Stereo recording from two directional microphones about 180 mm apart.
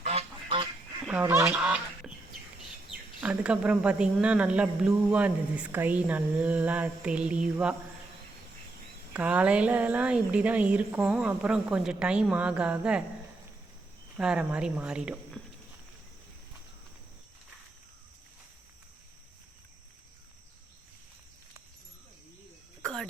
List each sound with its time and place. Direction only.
0.0 s duck: 35° right (ahead or behind)
1.0 s goose: 10° right (ahead or behind)
3.2 s a woman's voice: 5° right (ahead or behind)
9.1 s a woman's voice: 5° right (ahead or behind)
14.2 s speech: 5° right (ahead or behind)
22.8 s a sound: 5° left (ahead or behind)